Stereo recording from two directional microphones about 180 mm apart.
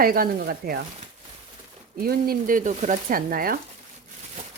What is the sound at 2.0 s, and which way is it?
Speech, 55° right (ahead or behind).